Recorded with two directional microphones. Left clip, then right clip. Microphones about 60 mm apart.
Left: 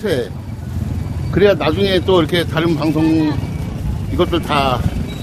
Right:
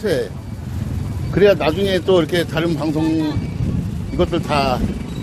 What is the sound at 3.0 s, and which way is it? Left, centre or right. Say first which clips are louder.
Speech: left 4 dB; left.